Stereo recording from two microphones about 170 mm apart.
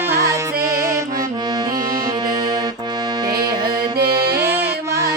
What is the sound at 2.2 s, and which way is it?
Music, 25° right (ahead or behind).